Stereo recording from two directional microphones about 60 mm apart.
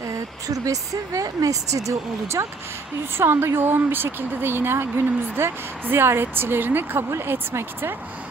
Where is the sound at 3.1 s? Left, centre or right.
Right.